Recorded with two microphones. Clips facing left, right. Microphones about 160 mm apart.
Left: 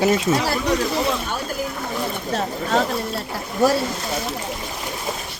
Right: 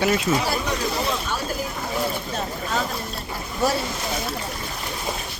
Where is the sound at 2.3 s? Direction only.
75° left (ahead or behind).